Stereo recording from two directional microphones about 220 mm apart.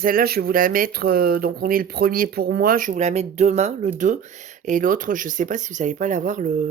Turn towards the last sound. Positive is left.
turn(degrees=-35)  # may be behind; listen again after turning